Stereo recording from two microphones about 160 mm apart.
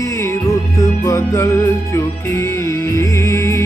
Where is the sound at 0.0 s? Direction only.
20° left (ahead or behind).